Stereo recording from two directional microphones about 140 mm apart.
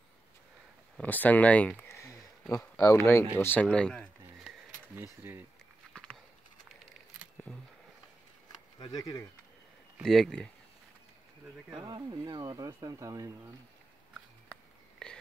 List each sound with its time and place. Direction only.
0.9 s speech: 10° left (ahead or behind)
4.9 s speech: 15° right (ahead or behind)
5.9 s a sound: 5° left (ahead or behind)
7.4 s a sound: 15° left (ahead or behind)
8.7 s speech: 30° left (ahead or behind)
10.0 s speech: 5° left (ahead or behind)
11.7 s speech: 30° right (ahead or behind)
15.0 s whispering: 5° left (ahead or behind)